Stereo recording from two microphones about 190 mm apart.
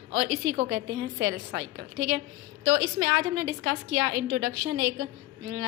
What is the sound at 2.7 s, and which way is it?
A woman's voice, 75° right (ahead or behind).